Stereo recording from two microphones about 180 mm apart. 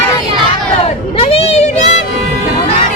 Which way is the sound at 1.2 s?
35° left (ahead or behind).